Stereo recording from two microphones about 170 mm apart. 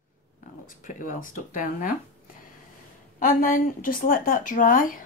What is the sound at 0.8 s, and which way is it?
Speech, 50° left (ahead or behind).